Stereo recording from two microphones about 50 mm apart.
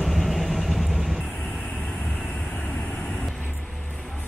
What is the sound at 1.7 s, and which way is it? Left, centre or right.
Vehicle, left.